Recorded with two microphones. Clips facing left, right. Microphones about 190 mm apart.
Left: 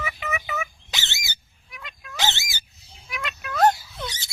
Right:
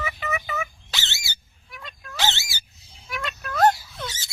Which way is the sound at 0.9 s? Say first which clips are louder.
Even; 15° left (ahead or behind).